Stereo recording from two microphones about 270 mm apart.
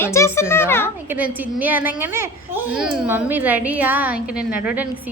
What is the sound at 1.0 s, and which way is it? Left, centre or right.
A woman's voice, centre.